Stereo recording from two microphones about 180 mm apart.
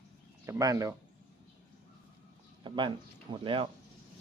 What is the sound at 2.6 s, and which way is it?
Speech, 25° right (ahead or behind).